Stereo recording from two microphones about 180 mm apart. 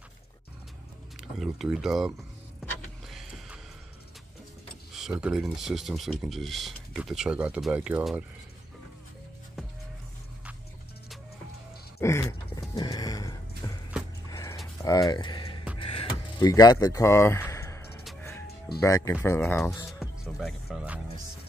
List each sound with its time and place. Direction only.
1.4 s speech: centre (ahead or behind)
3.1 s music: centre (ahead or behind)
4.9 s speech: 5° right (ahead or behind)
12.0 s a sound: 15° left (ahead or behind)
12.5 s music: 20° left (ahead or behind)
13.6 s horse: 20° left (ahead or behind)
14.3 s a sound: 15° left (ahead or behind)
18.8 s speech: 15° left (ahead or behind)
19.9 s music: centre (ahead or behind)